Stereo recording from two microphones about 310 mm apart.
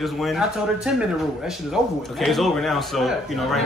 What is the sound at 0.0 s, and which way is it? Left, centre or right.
A man's voice, centre.